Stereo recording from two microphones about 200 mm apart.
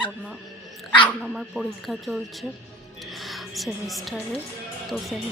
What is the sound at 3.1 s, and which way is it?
Music, centre (ahead or behind).